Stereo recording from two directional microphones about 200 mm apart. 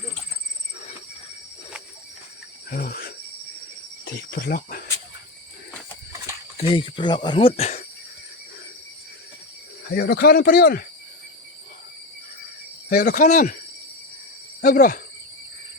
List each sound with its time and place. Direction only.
2.6 s speech: 45° left (ahead or behind)
6.6 s speech: 25° left (ahead or behind)
9.9 s speech: 50° left (ahead or behind)
12.9 s cricket: 40° left (ahead or behind)
14.6 s speech: 45° left (ahead or behind)